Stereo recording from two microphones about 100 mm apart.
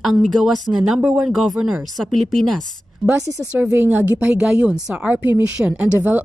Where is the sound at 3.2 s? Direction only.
30° right (ahead or behind).